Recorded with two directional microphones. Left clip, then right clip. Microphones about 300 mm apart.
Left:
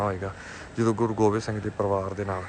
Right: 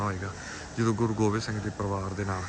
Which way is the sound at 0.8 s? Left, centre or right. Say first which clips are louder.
Left 4 dB; centre.